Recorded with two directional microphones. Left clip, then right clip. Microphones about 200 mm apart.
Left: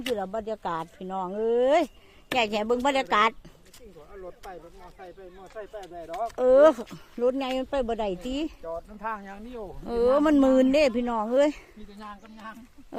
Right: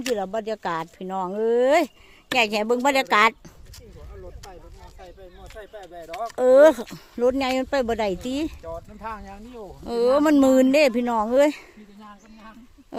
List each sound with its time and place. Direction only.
0.2 s speech: 30° right (ahead or behind)
4.4 s speech: 55° right (ahead or behind)
6.3 s speech: 25° right (ahead or behind)
8.6 s speech: 45° right (ahead or behind)
9.6 s speech: 20° right (ahead or behind)
11.9 s speech: 20° left (ahead or behind)